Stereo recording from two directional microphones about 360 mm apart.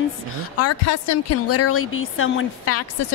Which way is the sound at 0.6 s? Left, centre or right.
Left.